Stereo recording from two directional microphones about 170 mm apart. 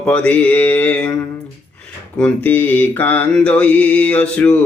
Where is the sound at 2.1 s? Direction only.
10° left (ahead or behind).